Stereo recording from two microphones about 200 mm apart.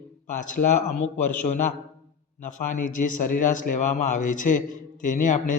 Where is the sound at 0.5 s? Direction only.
40° left (ahead or behind).